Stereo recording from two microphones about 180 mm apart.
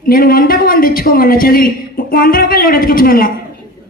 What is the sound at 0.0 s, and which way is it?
A man's voice, 55° left (ahead or behind).